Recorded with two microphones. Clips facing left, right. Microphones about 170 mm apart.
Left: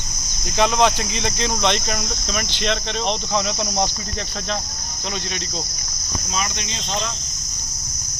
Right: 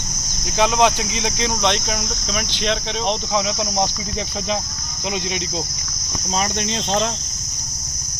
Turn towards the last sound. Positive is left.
turn(degrees=-50)  # may be behind; listen again after turning